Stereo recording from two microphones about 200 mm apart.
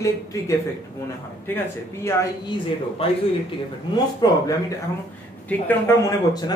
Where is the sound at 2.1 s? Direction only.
15° left (ahead or behind).